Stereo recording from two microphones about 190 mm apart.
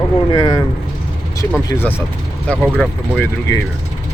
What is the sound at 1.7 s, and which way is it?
Speech, 10° left (ahead or behind).